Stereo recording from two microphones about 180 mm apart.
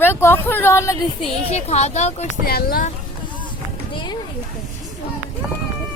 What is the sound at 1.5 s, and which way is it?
Speech, 35° left (ahead or behind).